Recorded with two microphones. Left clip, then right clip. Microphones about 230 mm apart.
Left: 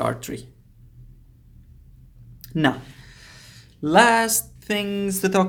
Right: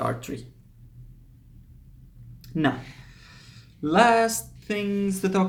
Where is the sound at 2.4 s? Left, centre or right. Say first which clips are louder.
Left 4 dB; left.